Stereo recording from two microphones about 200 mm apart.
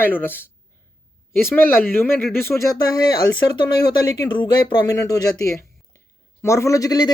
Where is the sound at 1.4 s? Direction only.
10° left (ahead or behind).